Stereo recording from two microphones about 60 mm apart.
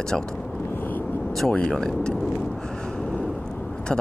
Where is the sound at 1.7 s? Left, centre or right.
Centre.